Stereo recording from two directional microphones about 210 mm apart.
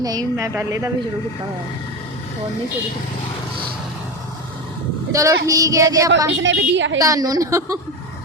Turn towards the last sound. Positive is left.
turn(degrees=-15)  # may be behind; listen again after turning